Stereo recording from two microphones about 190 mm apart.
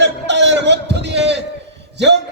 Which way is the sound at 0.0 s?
65° right (ahead or behind).